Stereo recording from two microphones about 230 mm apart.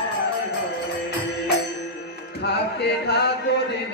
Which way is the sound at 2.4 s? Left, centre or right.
Left.